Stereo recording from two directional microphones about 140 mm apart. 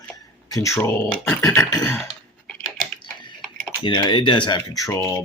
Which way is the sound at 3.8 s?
30° left (ahead or behind).